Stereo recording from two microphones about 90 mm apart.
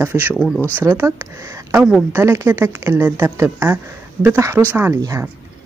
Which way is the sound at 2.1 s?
30° right (ahead or behind).